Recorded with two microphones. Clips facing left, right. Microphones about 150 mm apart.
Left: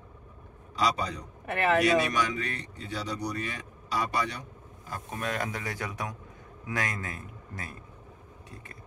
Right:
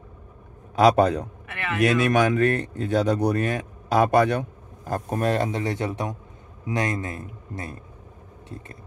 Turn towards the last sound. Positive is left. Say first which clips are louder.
# right 7 dB
turn(degrees=-25)  # may be behind; listen again after turning